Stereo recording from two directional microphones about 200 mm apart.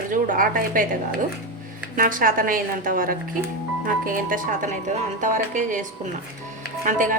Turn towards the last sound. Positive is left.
turn(degrees=-40)  # may be behind; listen again after turning